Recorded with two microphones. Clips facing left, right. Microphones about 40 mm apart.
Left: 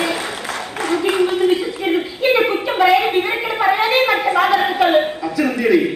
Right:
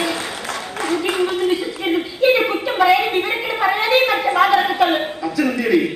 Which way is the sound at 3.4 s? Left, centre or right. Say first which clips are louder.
Left 2 dB; centre.